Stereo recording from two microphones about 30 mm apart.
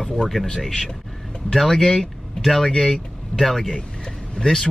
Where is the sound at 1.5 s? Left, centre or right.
Centre.